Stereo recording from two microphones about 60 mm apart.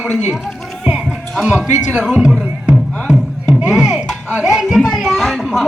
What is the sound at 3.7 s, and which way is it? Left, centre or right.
Music, centre.